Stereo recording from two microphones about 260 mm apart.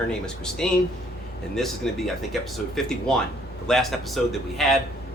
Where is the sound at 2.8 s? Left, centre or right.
Centre.